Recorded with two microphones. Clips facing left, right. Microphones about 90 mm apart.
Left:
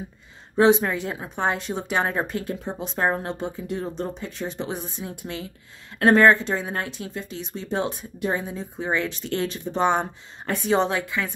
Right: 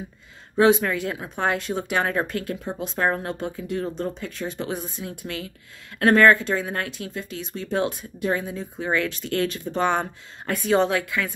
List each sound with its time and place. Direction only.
0.6 s speech: 25° left (ahead or behind)